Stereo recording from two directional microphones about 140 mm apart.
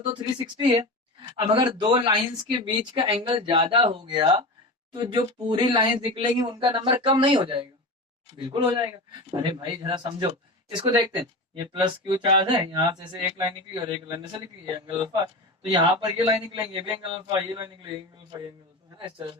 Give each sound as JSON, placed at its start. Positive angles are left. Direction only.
{"t": 0.8, "sound": "speech", "side_deg": -35}